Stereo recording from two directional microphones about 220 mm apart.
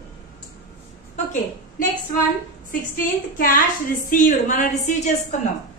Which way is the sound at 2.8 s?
40° left (ahead or behind).